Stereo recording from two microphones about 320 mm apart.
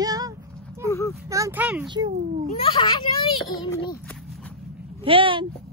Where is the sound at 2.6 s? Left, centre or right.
Centre.